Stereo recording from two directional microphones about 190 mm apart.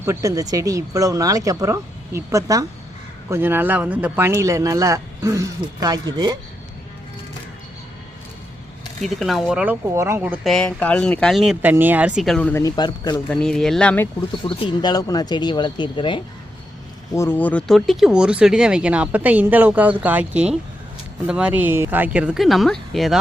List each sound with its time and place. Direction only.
0.0 s speech: 15° right (ahead or behind)
9.0 s speech: centre (ahead or behind)
10.5 s speech: 5° left (ahead or behind)
12.6 s speech: 20° left (ahead or behind)
13.3 s speech: 5° left (ahead or behind)
14.4 s speech: 25° left (ahead or behind)
17.2 s speech: 10° left (ahead or behind)